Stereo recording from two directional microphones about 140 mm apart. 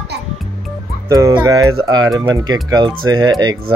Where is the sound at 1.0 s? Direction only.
20° right (ahead or behind).